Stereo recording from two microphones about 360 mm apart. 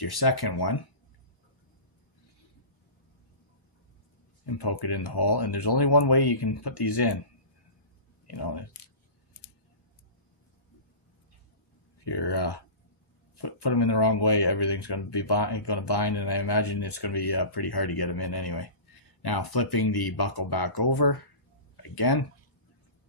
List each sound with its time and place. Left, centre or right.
0.0 s speech: left
4.5 s speech: left
8.3 s speech: left
12.0 s speech: left